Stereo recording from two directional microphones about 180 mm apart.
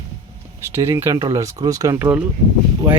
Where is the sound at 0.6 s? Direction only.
15° right (ahead or behind).